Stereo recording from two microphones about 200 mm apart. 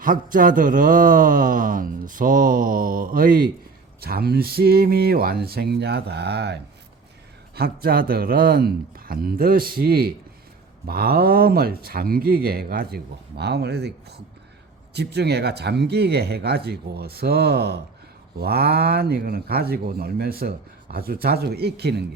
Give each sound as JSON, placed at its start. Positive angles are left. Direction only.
{"t": 0.0, "sound": "speech", "side_deg": -45}